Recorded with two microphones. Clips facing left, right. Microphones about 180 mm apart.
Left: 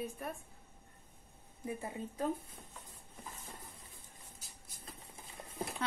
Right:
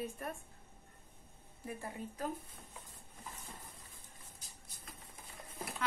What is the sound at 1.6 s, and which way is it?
Speech, 20° left (ahead or behind).